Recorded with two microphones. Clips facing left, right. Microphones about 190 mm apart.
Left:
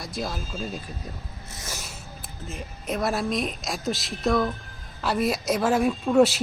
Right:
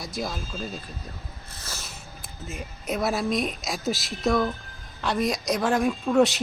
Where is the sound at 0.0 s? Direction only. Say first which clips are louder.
Even; centre (ahead or behind).